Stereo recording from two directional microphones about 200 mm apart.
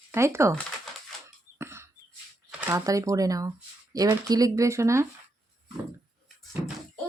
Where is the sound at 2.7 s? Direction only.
15° right (ahead or behind).